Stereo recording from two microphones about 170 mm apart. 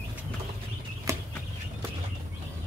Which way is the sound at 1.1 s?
20° right (ahead or behind).